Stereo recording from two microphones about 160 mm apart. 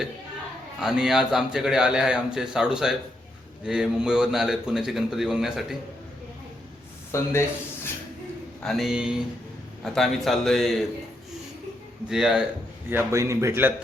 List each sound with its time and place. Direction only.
0.8 s a man's voice: 5° right (ahead or behind)
7.1 s speech: 15° left (ahead or behind)
8.6 s a man's voice: centre (ahead or behind)
12.0 s a man's voice: 5° right (ahead or behind)
12.9 s a man's voice: 15° right (ahead or behind)